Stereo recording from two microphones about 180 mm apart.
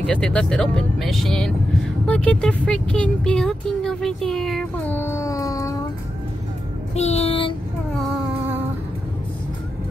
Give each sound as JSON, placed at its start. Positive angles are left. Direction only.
{"t": 0.0, "sound": "speech", "side_deg": 5}
{"t": 7.0, "sound": "music", "side_deg": 35}